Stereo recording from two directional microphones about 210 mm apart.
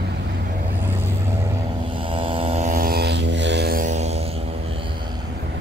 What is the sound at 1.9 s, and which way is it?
Vehicle, 25° right (ahead or behind).